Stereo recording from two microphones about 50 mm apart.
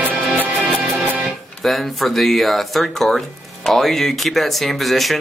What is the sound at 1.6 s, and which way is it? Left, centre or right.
Speech, centre.